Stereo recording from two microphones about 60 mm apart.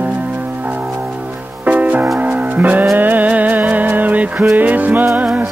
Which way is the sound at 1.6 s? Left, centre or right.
Right.